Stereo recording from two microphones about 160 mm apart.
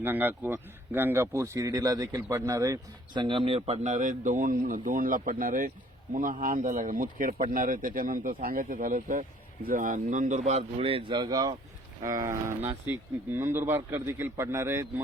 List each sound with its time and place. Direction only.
0.0 s speech: 10° right (ahead or behind)